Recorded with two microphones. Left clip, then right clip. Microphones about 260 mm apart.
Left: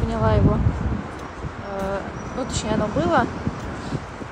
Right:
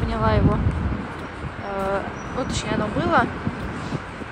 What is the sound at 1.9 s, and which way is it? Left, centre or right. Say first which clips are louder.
Speech: right 2 dB; centre.